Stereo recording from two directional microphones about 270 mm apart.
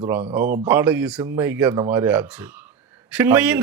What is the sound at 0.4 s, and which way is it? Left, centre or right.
Speech, right.